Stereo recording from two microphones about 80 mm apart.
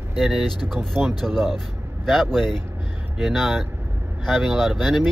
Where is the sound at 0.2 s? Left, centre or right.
Centre.